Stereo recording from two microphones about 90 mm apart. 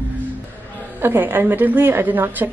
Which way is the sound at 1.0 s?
25° right (ahead or behind).